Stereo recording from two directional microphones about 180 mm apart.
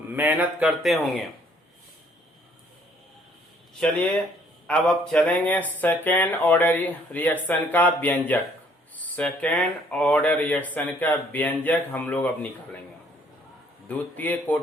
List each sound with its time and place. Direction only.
0.1 s speech: 10° right (ahead or behind)
4.6 s speech: 5° left (ahead or behind)
13.8 s speech: 10° left (ahead or behind)